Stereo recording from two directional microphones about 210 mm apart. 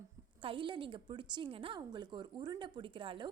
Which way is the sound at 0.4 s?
25° right (ahead or behind).